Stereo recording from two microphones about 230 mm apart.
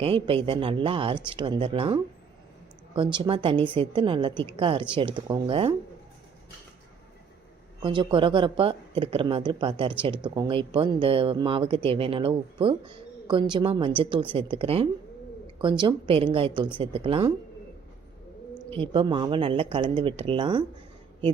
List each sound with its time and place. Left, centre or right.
0.0 s speech: right
7.8 s speech: right
18.8 s speech: centre